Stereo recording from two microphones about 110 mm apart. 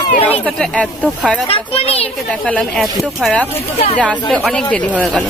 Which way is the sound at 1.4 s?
60° left (ahead or behind).